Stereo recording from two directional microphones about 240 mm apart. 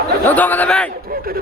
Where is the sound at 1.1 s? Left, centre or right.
Right.